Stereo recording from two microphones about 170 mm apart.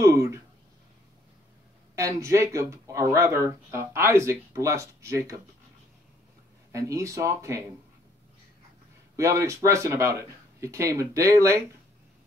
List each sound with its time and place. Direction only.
0.0 s a sound: 15° right (ahead or behind)
2.0 s speech: 20° right (ahead or behind)
6.7 s speech: 20° right (ahead or behind)
9.1 s speech: 20° right (ahead or behind)